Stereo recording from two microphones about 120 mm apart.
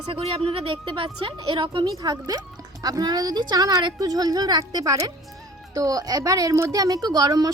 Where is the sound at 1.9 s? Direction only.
30° right (ahead or behind).